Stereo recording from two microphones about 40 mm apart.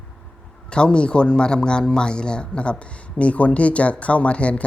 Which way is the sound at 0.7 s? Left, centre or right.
Left.